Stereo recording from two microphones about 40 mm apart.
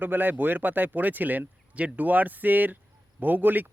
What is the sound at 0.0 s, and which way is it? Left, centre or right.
A man's voice, right.